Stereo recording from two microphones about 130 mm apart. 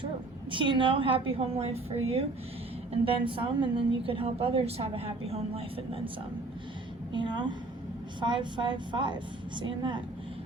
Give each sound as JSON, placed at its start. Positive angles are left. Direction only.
{"t": 0.5, "sound": "a woman's voice", "side_deg": -40}
{"t": 7.1, "sound": "a woman's voice", "side_deg": -35}